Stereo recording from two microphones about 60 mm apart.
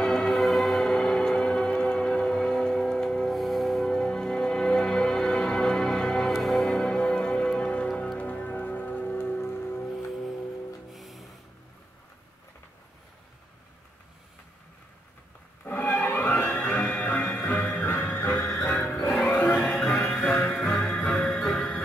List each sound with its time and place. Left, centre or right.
0.0 s music: centre; by 9.9 s left
9.9 s vehicle: centre
10.9 s music: centre
15.6 s music: left
20.2 s music: centre